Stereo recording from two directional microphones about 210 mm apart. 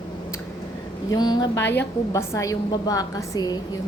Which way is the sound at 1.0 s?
20° left (ahead or behind).